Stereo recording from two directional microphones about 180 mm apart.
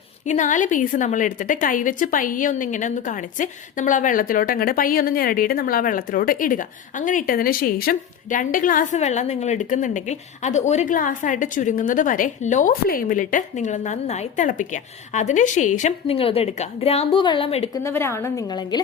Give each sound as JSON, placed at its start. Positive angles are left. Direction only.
{"t": 0.3, "sound": "a woman's voice", "side_deg": 45}
{"t": 17.8, "sound": "a woman's voice", "side_deg": 15}